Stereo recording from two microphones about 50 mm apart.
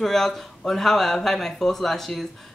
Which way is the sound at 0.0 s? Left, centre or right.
Centre.